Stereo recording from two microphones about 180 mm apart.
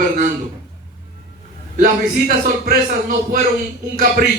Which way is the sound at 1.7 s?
50° right (ahead or behind).